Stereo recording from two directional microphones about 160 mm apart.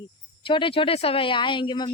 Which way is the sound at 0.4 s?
30° left (ahead or behind).